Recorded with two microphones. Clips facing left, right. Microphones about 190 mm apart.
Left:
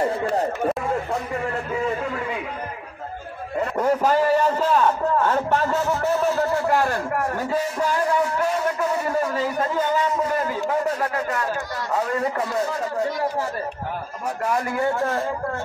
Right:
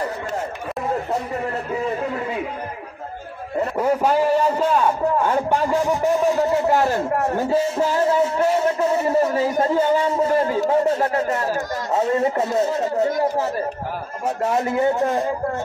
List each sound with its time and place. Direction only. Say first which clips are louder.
0.0 s a sound: left 4 dB; 30° left (ahead or behind)
3.7 s a man's voice: right 1 dB; 10° right (ahead or behind)
14.2 s a man's voice: right 4 dB; 25° right (ahead or behind)